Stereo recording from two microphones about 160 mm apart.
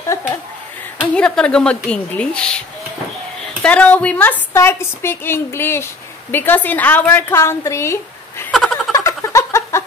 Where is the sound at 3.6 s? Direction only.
10° left (ahead or behind).